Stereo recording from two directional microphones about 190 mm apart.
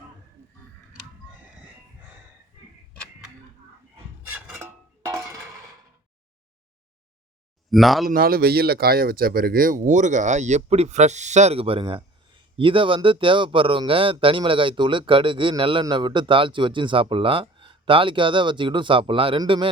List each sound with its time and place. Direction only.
4.3 s a sound: 5° right (ahead or behind)
7.7 s speech: centre (ahead or behind)
8.0 s speech: 50° right (ahead or behind); by 19.6 s 25° right (ahead or behind)